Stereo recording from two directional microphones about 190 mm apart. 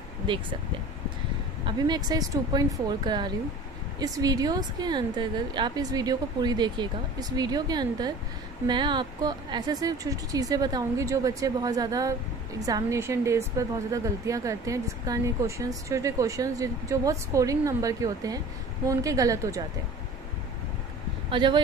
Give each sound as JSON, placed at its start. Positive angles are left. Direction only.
{"t": 1.7, "sound": "a woman's voice", "side_deg": -20}
{"t": 21.3, "sound": "speech", "side_deg": -25}